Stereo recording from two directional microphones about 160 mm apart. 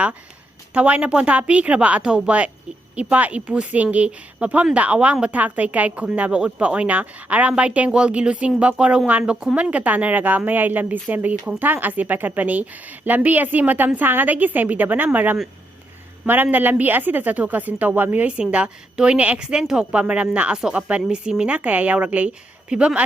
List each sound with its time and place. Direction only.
0.7 s speech: 10° right (ahead or behind)